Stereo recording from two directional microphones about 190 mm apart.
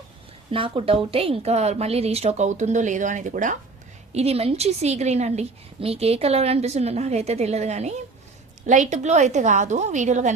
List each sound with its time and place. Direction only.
0.5 s a woman's voice: 30° right (ahead or behind)